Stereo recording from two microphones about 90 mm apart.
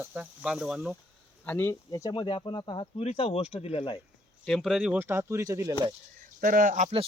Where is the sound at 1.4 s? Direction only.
20° left (ahead or behind).